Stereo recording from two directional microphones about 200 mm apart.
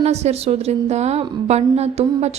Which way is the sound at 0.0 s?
35° right (ahead or behind).